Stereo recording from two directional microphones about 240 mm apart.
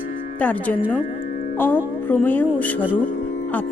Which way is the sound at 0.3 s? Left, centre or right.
Centre.